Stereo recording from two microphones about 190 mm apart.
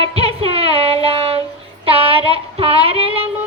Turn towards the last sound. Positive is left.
turn(degrees=-30)  # may be behind; listen again after turning